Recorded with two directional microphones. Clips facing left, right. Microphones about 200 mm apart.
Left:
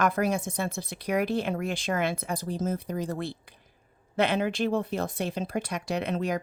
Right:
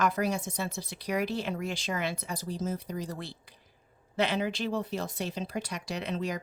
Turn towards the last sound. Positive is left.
turn(degrees=55)  # may be behind; listen again after turning